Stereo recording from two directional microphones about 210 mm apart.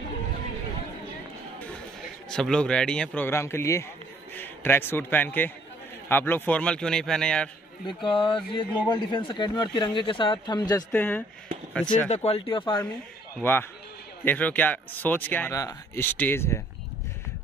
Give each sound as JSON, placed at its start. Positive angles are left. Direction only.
{"t": 2.2, "sound": "speech", "side_deg": 5}
{"t": 7.8, "sound": "speech", "side_deg": 25}
{"t": 10.9, "sound": "speech", "side_deg": 5}
{"t": 12.1, "sound": "speech", "side_deg": 30}
{"t": 13.4, "sound": "speech", "side_deg": 10}